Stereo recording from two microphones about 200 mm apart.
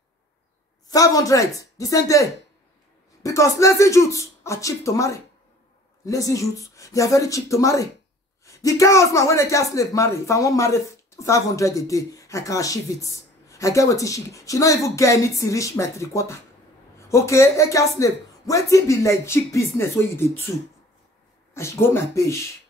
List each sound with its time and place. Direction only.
0.8 s speech: 15° left (ahead or behind)
21.5 s speech: 10° left (ahead or behind)